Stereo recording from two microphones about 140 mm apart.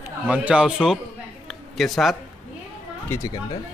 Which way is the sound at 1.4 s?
Centre (ahead or behind).